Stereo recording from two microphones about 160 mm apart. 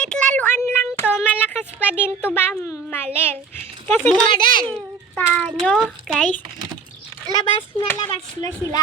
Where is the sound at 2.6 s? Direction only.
15° left (ahead or behind).